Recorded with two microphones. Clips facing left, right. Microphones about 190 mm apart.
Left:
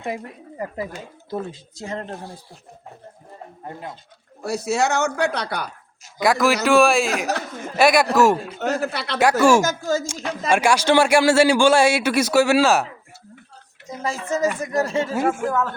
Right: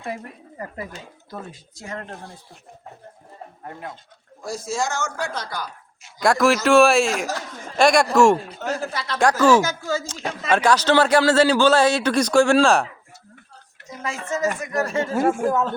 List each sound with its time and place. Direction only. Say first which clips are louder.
1.3 s speech: left 8 dB; 25° left (ahead or behind)
4.4 s speech: left 5 dB; 65° left (ahead or behind)
6.2 s speech: right 1 dB; centre (ahead or behind)
8.5 s speech: left 3 dB; 65° left (ahead or behind)
9.6 s speech: left 2 dB; 45° left (ahead or behind)
10.5 s a man's voice: even; 10° left (ahead or behind)
14.0 s speech: left 3 dB; 35° left (ahead or behind)
14.8 s speech: left 2 dB; 20° left (ahead or behind)
15.1 s speech: right 4 dB; centre (ahead or behind)
15.4 s speech: right 2 dB; 15° right (ahead or behind)